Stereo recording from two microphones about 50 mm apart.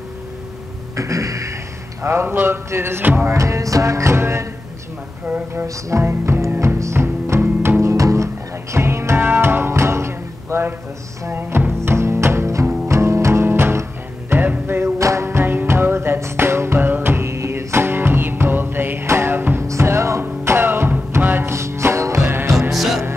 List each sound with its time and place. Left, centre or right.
0.9 s music: right
2.2 s music: right
3.3 s music: right
5.9 s music: right
7.8 s music: right
8.7 s music: right
9.2 s music: right
15.0 s music: right
15.2 s music: right
19.7 s music: right
20.4 s music: right
21.5 s music: right
22.2 s music: right
22.7 s music: centre